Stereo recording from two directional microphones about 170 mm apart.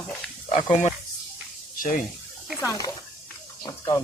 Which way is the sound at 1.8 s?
50° left (ahead or behind).